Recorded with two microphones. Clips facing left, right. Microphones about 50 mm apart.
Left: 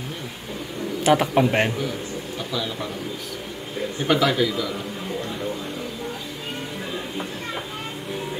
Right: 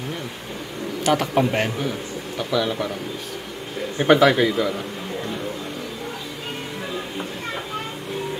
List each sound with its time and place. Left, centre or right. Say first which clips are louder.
1.0 s speech: left 1 dB; centre
2.5 s speech: right 7 dB; right
4.0 s speech: right 5 dB; right